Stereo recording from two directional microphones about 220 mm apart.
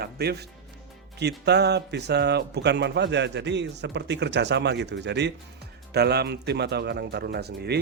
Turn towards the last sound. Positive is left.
turn(degrees=-50)  # may be behind; listen again after turning